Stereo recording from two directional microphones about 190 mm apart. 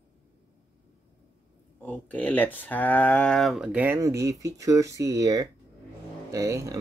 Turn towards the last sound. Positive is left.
turn(degrees=-15)  # may be behind; listen again after turning